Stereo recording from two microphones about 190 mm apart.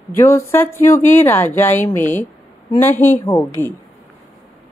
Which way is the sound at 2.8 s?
10° left (ahead or behind).